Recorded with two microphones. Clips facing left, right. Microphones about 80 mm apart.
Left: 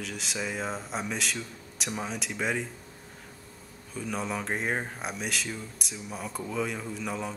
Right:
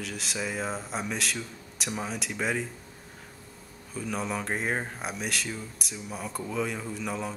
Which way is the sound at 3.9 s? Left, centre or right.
Centre.